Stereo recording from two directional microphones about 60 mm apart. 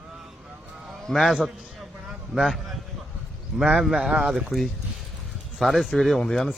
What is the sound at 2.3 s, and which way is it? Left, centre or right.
Speech, centre.